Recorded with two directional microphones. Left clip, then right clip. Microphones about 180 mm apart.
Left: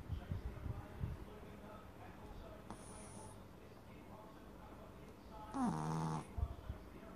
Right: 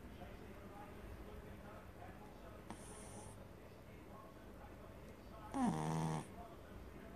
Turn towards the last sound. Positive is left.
turn(degrees=-25)  # may be behind; listen again after turning